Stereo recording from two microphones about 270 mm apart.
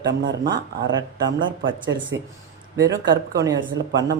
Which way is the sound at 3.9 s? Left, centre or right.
Right.